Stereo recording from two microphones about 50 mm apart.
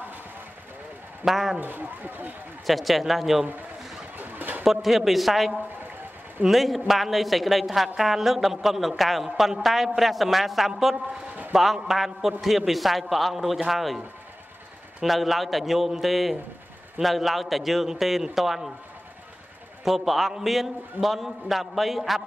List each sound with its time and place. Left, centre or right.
1.2 s a woman's voice: centre
1.6 s speech: right
2.6 s a woman's voice: centre
4.2 s a sound: right
4.6 s a woman's voice: centre
15.0 s a woman's voice: centre
19.8 s a woman's voice: centre